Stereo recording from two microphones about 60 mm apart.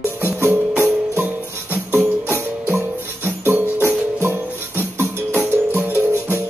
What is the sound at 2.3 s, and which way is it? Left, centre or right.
Music, right.